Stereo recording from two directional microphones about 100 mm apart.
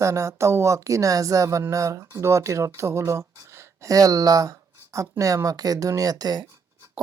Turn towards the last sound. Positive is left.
turn(degrees=-45)  # may be behind; listen again after turning